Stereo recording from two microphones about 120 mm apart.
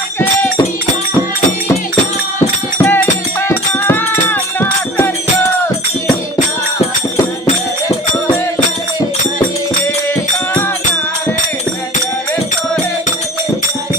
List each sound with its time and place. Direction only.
2.8 s music: 15° left (ahead or behind)